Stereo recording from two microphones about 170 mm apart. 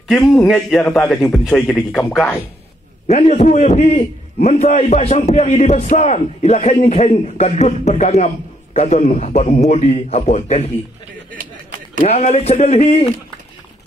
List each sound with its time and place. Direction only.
0.3 s a man's voice: 5° left (ahead or behind)
3.1 s a man's voice: 40° left (ahead or behind)
12.0 s a man's voice: 40° left (ahead or behind)